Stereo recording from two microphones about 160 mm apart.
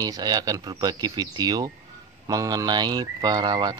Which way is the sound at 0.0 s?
25° right (ahead or behind).